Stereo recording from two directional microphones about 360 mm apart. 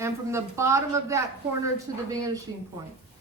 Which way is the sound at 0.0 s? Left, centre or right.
Centre.